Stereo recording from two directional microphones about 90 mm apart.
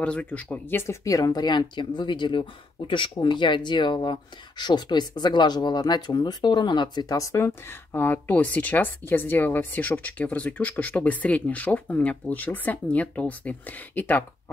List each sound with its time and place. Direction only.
0.0 s speech: 15° left (ahead or behind)
1.0 s speech: 40° left (ahead or behind)
7.2 s speech: 35° left (ahead or behind); by 14.2 s 20° left (ahead or behind)